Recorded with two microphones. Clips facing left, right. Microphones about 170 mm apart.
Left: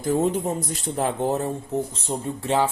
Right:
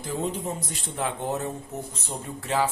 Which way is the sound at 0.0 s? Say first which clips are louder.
Left 7 dB; 45° left (ahead or behind).